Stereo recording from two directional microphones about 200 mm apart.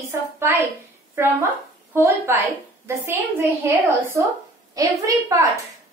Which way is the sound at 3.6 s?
15° right (ahead or behind).